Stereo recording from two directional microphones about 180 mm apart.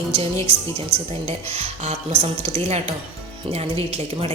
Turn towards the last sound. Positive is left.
turn(degrees=-35)  # may be behind; listen again after turning